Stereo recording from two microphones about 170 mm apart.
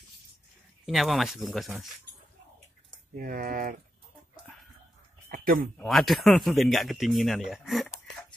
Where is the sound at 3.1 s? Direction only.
55° right (ahead or behind).